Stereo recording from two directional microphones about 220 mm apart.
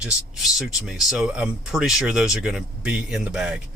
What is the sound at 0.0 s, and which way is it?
Speech, centre (ahead or behind).